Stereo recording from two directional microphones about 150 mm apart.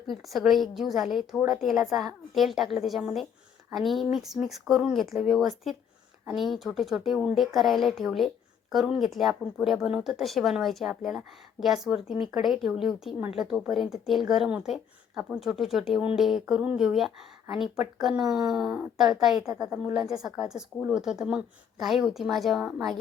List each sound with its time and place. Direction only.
0.1 s speech: centre (ahead or behind)